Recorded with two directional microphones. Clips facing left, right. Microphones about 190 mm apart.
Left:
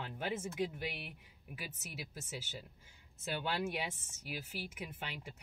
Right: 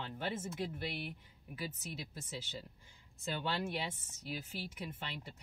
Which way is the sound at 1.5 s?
10° left (ahead or behind).